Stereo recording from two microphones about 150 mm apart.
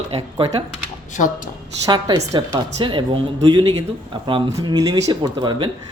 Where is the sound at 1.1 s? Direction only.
60° left (ahead or behind).